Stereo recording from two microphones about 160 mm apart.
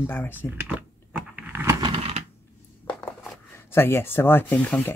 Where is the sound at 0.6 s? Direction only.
10° right (ahead or behind).